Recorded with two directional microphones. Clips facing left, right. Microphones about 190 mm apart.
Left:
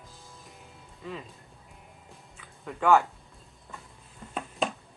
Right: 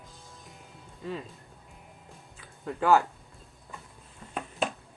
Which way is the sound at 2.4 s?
35° right (ahead or behind).